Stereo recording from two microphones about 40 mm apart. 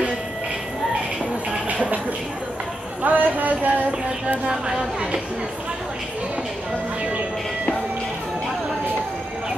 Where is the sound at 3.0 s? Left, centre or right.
Right.